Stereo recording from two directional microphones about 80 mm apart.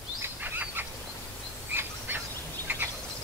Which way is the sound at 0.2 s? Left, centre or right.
Right.